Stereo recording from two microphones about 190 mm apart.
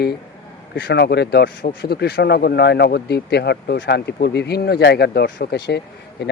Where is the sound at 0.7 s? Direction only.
60° left (ahead or behind).